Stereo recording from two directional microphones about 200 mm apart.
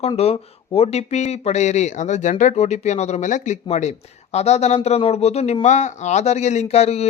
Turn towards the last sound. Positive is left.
turn(degrees=30)  # may be behind; listen again after turning